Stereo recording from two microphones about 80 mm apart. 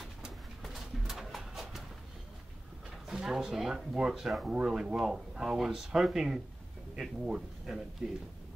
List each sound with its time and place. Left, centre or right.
0.0 s pigeon: centre
3.1 s speech: centre